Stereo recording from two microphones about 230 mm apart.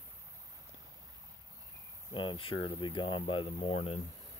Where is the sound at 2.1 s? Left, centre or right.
Left.